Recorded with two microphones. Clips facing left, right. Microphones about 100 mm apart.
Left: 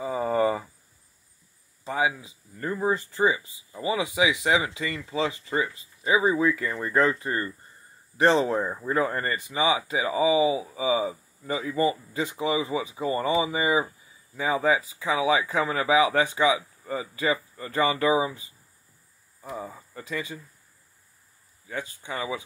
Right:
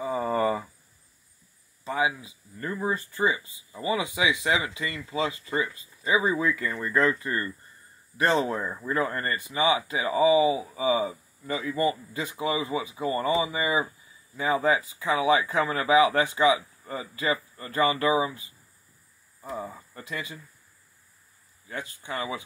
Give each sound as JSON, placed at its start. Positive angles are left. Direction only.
{"t": 0.0, "sound": "a sound", "side_deg": 20}
{"t": 1.9, "sound": "speech", "side_deg": 25}
{"t": 6.7, "sound": "speech", "side_deg": 35}
{"t": 7.0, "sound": "speech", "side_deg": 25}
{"t": 19.9, "sound": "speech", "side_deg": 25}